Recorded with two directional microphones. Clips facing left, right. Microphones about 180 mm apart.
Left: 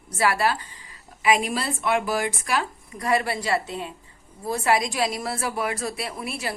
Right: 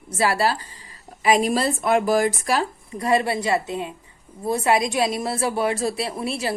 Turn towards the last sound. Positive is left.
turn(degrees=-25)  # may be behind; listen again after turning